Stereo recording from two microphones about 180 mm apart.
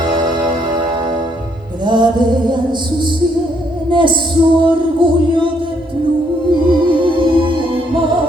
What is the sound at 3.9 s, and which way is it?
Music, 25° right (ahead or behind).